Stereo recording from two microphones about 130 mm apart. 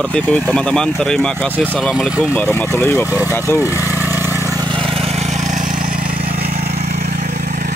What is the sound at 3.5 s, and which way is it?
Vehicle, 15° right (ahead or behind).